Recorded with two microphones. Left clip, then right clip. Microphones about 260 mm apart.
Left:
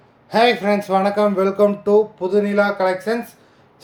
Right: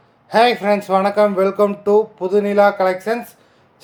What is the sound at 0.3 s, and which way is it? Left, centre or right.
Speech, centre.